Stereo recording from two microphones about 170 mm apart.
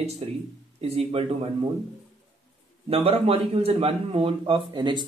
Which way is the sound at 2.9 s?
35° right (ahead or behind).